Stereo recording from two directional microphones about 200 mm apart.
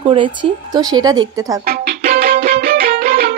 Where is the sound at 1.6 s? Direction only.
50° right (ahead or behind).